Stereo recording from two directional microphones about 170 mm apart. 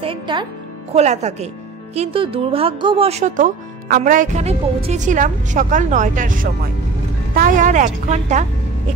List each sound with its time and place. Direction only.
0.0 s speech: 30° right (ahead or behind)
0.9 s speech: 40° right (ahead or behind)